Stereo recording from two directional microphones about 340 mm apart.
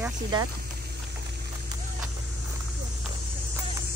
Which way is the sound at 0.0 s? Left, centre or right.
Centre.